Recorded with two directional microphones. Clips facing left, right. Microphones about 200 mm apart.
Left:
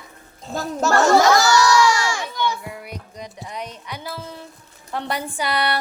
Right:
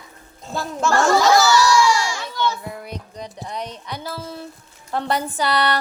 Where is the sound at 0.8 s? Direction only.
40° left (ahead or behind).